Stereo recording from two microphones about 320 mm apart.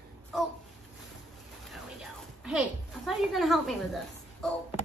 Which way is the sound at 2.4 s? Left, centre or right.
Centre.